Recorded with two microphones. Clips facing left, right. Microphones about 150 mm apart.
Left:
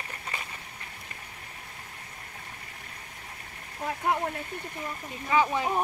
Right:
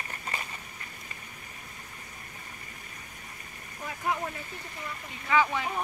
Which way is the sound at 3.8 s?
55° left (ahead or behind).